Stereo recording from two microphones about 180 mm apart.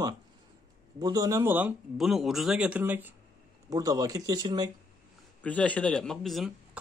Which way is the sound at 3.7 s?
20° right (ahead or behind).